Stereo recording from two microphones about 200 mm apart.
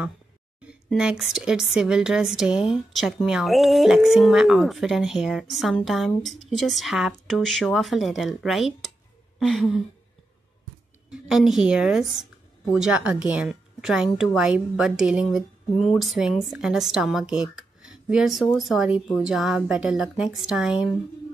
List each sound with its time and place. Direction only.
0.7 s speech: 5° right (ahead or behind)
11.1 s speech: centre (ahead or behind)